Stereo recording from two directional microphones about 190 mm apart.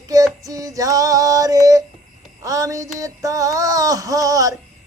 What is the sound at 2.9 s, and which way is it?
Music, 20° right (ahead or behind).